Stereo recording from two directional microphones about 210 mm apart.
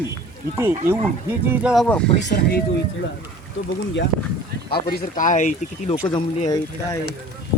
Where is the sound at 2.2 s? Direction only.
55° left (ahead or behind).